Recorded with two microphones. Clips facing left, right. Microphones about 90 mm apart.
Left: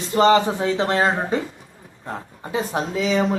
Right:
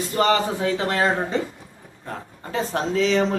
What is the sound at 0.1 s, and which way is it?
A man's voice, 25° left (ahead or behind).